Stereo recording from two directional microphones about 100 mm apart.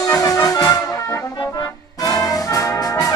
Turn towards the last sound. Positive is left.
turn(degrees=35)  # may be behind; listen again after turning